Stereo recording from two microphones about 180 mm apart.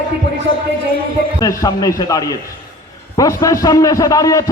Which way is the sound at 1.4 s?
20° left (ahead or behind).